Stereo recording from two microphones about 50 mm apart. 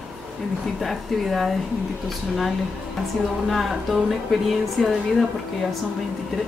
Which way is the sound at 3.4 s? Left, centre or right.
Centre.